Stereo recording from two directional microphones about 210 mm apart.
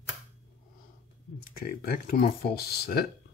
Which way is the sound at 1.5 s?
45° left (ahead or behind).